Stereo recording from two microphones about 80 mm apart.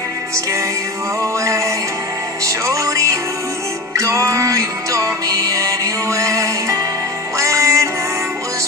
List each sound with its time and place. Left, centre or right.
1.2 s music: right